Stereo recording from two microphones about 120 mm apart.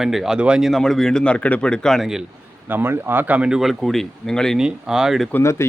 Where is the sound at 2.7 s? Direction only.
15° right (ahead or behind); by 5.3 s centre (ahead or behind).